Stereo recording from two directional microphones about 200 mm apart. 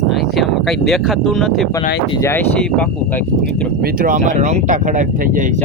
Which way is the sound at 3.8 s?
45° right (ahead or behind).